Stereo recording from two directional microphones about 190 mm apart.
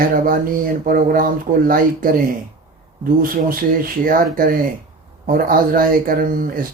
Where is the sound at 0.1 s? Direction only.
50° right (ahead or behind).